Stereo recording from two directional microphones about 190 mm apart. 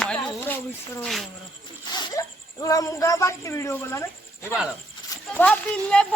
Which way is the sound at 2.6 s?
20° left (ahead or behind).